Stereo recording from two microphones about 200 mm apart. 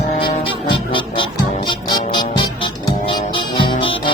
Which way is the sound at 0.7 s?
25° left (ahead or behind).